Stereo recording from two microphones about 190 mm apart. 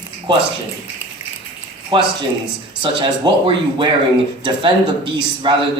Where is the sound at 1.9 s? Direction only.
25° right (ahead or behind).